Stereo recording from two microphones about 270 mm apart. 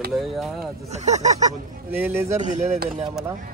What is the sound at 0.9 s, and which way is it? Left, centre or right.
Speech, right.